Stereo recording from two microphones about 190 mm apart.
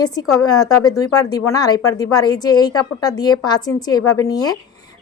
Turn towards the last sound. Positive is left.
turn(degrees=20)  # may be behind; listen again after turning